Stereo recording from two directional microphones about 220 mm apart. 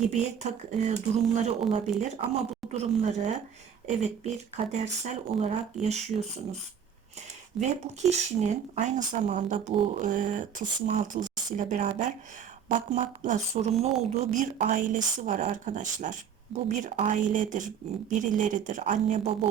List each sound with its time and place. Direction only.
0.0 s speech: 30° right (ahead or behind)
7.6 s speech: centre (ahead or behind)
8.4 s speech: 30° right (ahead or behind)